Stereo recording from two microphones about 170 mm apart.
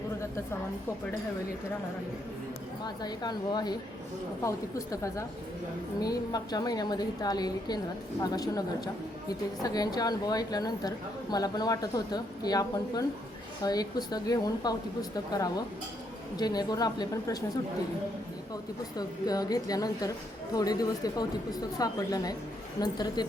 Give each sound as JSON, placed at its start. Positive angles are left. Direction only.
{"t": 2.8, "sound": "a woman's voice", "side_deg": 25}
{"t": 18.9, "sound": "a woman's voice", "side_deg": 20}